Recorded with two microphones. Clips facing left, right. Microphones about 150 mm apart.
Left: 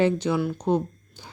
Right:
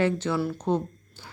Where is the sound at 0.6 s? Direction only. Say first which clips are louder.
Left 3 dB; 15° left (ahead or behind).